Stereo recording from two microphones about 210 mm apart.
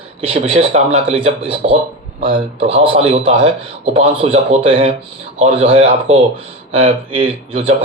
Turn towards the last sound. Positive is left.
turn(degrees=-25)  # may be behind; listen again after turning